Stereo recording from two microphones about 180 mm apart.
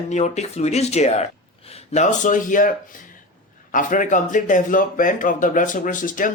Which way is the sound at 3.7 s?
45° left (ahead or behind).